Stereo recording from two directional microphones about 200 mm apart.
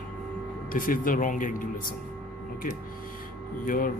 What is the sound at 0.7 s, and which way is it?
Speech, 45° left (ahead or behind).